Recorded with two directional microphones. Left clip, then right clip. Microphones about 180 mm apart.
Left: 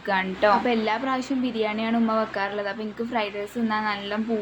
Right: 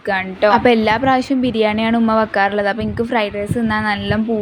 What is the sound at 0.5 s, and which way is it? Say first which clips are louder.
A woman's voice: right 9 dB; 50° right (ahead or behind).